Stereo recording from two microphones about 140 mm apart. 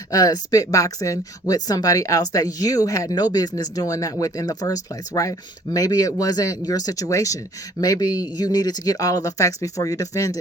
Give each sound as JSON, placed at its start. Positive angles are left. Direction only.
{"t": 0.1, "sound": "speech", "side_deg": 25}